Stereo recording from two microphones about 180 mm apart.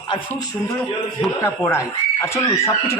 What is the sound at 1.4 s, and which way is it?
Speech, 15° left (ahead or behind).